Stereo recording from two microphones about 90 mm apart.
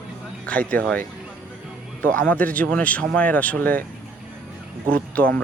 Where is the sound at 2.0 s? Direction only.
15° left (ahead or behind).